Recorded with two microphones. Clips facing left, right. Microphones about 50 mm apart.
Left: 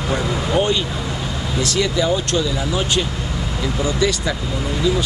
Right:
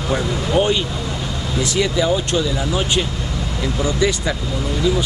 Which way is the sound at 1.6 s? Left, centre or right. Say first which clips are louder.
Right 1 dB; centre.